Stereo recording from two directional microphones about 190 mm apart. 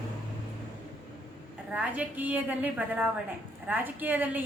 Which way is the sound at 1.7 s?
5° right (ahead or behind).